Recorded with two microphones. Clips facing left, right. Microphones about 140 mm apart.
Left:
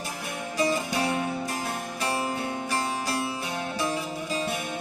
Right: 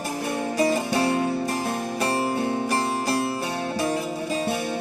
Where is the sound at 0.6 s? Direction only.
45° right (ahead or behind).